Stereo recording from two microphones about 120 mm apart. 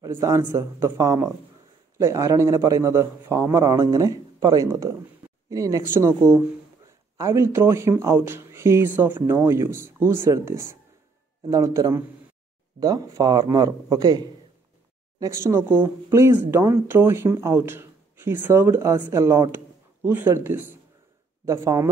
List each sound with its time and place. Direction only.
0.0 s a man's voice: 30° right (ahead or behind)